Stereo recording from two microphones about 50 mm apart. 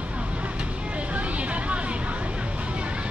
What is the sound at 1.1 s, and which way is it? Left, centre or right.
Vehicle, right.